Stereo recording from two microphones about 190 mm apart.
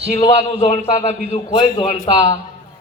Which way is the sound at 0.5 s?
35° left (ahead or behind).